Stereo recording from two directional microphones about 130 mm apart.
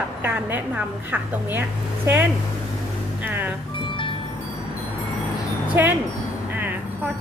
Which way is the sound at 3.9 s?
40° left (ahead or behind).